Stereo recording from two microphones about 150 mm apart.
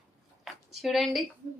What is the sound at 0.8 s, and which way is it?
Speech, centre (ahead or behind).